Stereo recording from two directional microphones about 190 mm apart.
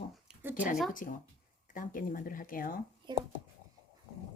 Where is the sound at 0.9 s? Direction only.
45° left (ahead or behind).